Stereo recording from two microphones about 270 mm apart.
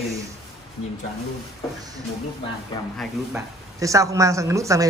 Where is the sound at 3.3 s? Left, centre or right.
Centre.